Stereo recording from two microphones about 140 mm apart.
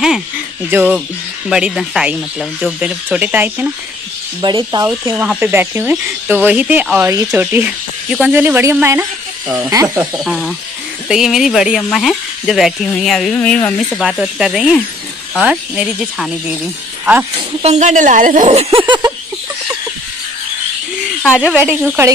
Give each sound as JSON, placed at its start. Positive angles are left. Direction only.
{"t": 0.7, "sound": "speech", "side_deg": -15}
{"t": 1.5, "sound": "speech", "side_deg": -5}
{"t": 4.4, "sound": "speech", "side_deg": -30}
{"t": 5.1, "sound": "speech", "side_deg": -10}
{"t": 10.1, "sound": "speech", "side_deg": 0}
{"t": 13.7, "sound": "speech", "side_deg": 0}
{"t": 17.6, "sound": "speech", "side_deg": -55}
{"t": 21.4, "sound": "speech", "side_deg": -10}